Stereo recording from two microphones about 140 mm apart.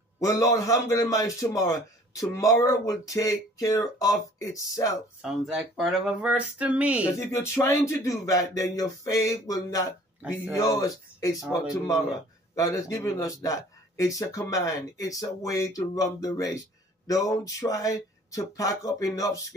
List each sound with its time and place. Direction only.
0.2 s speech: 25° left (ahead or behind)
5.2 s a sound: 5° right (ahead or behind)
7.2 s speech: 20° left (ahead or behind)
12.5 s speech: 25° left (ahead or behind)